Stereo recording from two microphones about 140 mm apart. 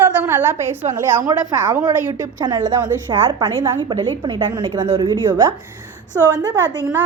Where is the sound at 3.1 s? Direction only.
35° right (ahead or behind).